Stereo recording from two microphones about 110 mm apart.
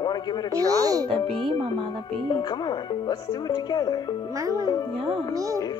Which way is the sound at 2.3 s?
40° left (ahead or behind).